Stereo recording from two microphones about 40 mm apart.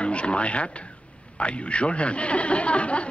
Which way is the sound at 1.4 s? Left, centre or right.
Left.